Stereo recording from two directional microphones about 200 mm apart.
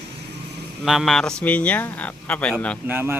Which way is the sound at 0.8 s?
Centre (ahead or behind).